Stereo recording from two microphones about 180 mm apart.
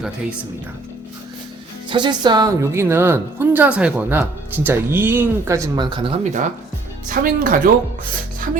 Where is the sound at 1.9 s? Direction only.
25° right (ahead or behind).